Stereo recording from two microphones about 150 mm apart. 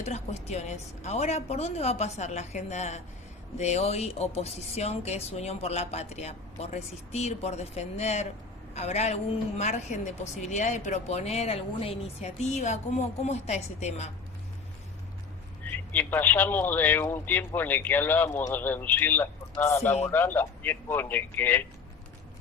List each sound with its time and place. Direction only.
0.0 s a woman's voice: 45° left (ahead or behind)
15.6 s a man's voice: 10° left (ahead or behind)